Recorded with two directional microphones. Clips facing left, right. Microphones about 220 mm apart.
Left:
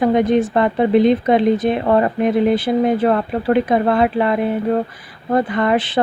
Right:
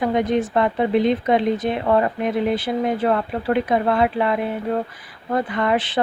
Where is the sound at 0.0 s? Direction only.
45° left (ahead or behind).